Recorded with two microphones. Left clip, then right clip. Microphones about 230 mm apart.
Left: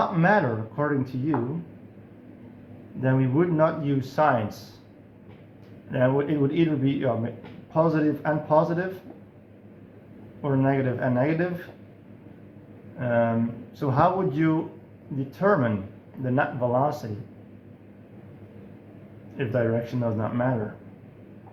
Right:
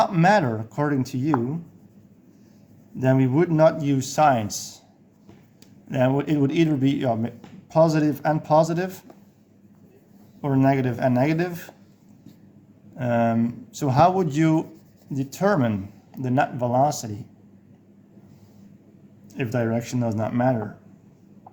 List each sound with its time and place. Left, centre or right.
0.0 s speech: right
3.0 s speech: right
5.9 s speech: right
10.4 s speech: right
13.0 s speech: right
19.4 s speech: right